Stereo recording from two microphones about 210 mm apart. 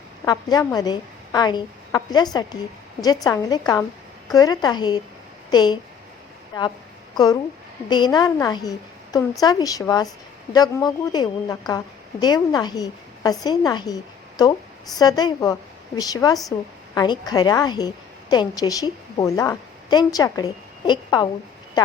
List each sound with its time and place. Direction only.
0.3 s a woman's voice: 20° left (ahead or behind)
7.9 s a woman's voice: 20° left (ahead or behind)